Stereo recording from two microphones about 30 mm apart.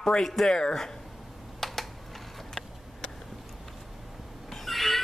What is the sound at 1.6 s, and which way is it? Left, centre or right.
Typing, centre.